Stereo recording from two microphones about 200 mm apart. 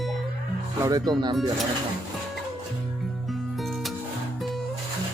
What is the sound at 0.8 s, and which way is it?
Speech, 20° right (ahead or behind).